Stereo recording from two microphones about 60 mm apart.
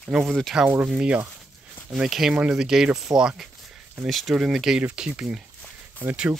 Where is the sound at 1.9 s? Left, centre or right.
Centre.